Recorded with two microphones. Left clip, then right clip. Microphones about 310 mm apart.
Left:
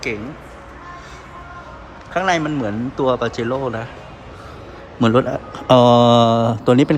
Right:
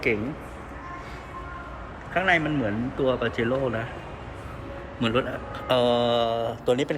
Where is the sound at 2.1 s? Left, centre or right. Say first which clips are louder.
Left 4 dB; centre.